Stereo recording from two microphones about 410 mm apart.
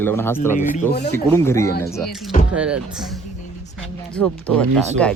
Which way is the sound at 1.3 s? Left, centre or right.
Centre.